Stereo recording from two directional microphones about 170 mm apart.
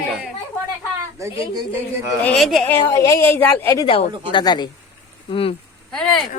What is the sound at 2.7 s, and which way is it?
A woman's voice, 15° left (ahead or behind).